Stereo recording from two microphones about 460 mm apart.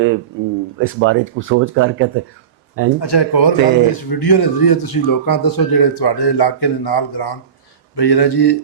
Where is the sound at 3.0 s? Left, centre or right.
Left.